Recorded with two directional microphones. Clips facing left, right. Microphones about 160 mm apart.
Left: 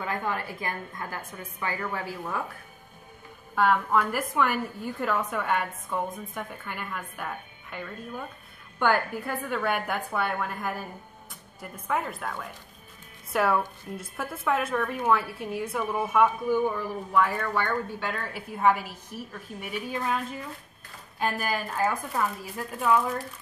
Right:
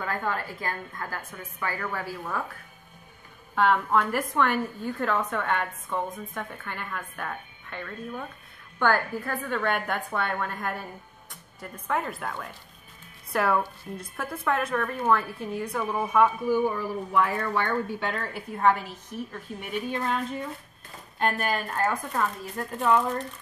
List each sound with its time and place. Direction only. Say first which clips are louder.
0.0 s a woman's voice: even; 15° left (ahead or behind)
3.5 s a woman's voice: right 1 dB; 5° left (ahead or behind)